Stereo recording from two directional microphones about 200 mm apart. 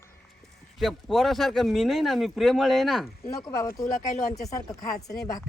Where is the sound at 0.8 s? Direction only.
Centre (ahead or behind).